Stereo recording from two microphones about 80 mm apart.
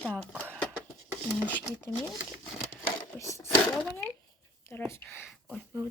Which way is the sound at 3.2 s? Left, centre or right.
Left.